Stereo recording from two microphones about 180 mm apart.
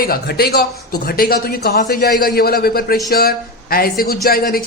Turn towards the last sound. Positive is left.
turn(degrees=55)  # may be behind; listen again after turning